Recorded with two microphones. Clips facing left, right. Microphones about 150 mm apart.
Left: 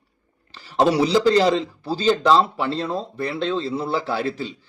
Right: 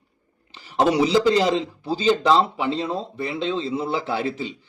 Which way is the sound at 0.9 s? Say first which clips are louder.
Even; 15° right (ahead or behind).